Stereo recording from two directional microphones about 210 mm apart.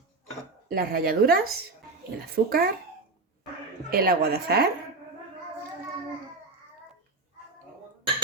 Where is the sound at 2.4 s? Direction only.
45° right (ahead or behind).